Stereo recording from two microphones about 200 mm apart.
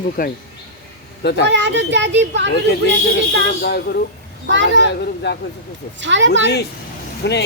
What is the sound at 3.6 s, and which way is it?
Speech, 55° left (ahead or behind).